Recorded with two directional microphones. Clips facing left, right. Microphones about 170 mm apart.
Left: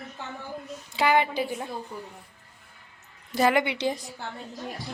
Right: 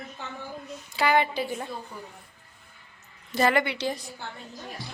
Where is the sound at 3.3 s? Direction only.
15° left (ahead or behind).